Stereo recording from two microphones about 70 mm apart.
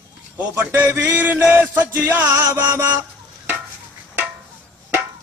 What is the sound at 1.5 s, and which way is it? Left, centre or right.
A man's voice, right.